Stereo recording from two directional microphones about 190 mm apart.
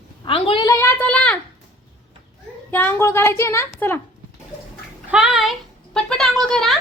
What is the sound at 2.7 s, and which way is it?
A woman's voice, 10° left (ahead or behind).